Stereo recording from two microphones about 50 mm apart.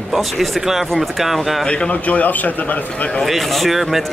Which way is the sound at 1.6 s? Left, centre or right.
Left.